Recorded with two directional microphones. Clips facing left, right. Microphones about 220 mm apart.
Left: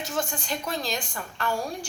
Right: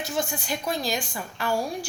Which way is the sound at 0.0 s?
10° right (ahead or behind).